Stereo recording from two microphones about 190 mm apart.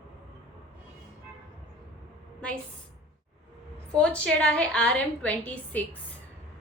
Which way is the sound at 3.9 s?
5° left (ahead or behind).